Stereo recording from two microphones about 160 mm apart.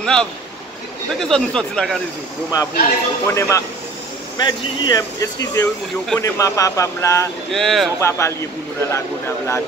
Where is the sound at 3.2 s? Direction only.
15° left (ahead or behind).